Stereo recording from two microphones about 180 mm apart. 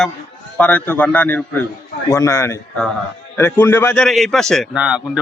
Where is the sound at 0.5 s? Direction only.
5° left (ahead or behind).